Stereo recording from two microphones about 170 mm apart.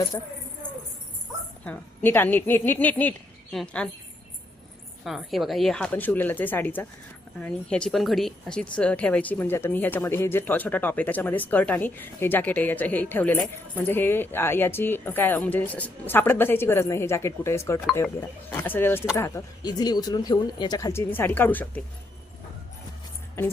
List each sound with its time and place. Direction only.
0.1 s speech: 20° left (ahead or behind)
1.6 s speech: 10° left (ahead or behind)
5.0 s a woman's voice: centre (ahead or behind)